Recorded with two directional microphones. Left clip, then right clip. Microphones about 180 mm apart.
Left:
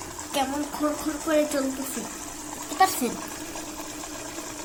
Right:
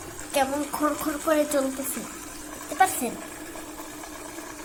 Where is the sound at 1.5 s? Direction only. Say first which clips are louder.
Right 2 dB; 20° right (ahead or behind).